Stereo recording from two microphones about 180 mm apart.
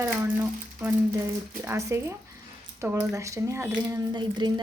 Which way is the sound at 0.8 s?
10° right (ahead or behind).